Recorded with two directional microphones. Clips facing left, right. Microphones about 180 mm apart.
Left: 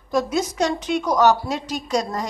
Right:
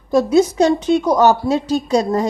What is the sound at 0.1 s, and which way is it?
A woman's voice, 30° right (ahead or behind).